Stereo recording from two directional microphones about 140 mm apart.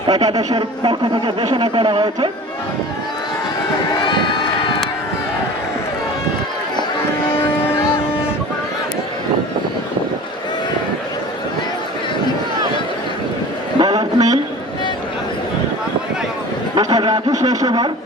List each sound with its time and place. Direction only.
0.1 s speech: 30° right (ahead or behind)
4.0 s crowd: 35° left (ahead or behind)
13.7 s a sound: 30° right (ahead or behind)
16.7 s speech: 30° right (ahead or behind)